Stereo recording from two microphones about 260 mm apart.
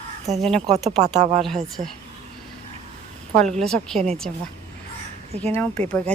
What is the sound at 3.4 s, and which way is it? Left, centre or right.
Speech, centre.